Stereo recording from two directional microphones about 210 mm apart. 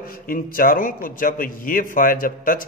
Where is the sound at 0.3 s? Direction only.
40° left (ahead or behind).